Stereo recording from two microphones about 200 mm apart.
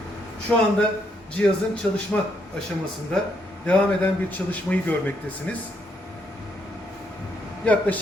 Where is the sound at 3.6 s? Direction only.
5° left (ahead or behind).